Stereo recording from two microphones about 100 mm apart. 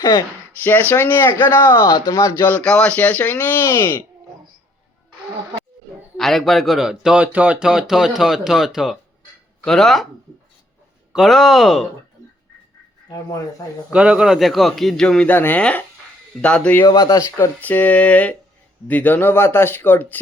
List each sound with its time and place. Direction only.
0.0 s speech: 45° left (ahead or behind)
0.6 s speech: 20° left (ahead or behind)
2.4 s speech: 15° left (ahead or behind)
6.1 s speech: centre (ahead or behind)
11.1 s speech: centre (ahead or behind)
13.6 s a man's voice: 40° left (ahead or behind)
13.9 s speech: 10° right (ahead or behind); by 16.8 s 10° left (ahead or behind)
16.8 s speech: 40° left (ahead or behind); by 20.1 s 20° left (ahead or behind)